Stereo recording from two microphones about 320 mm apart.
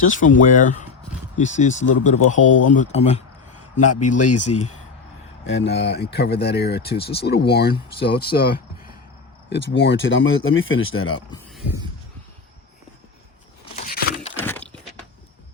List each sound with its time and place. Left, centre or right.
0.0 s speech: left
2.5 s speech: left
2.7 s speech: left
3.8 s speech: left
5.5 s speech: left
13.7 s a sound: left
14.3 s a sound: centre